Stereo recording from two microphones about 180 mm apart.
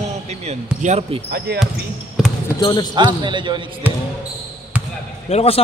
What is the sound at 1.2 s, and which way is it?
Speech, 65° right (ahead or behind).